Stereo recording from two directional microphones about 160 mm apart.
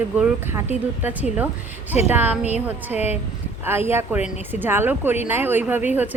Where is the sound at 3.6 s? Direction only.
15° right (ahead or behind).